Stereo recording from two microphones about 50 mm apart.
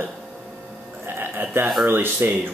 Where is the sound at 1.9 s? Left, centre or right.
Right.